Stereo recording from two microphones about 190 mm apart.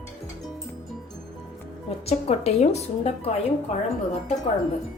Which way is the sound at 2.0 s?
35° left (ahead or behind).